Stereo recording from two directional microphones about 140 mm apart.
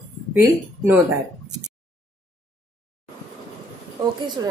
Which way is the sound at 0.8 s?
20° right (ahead or behind).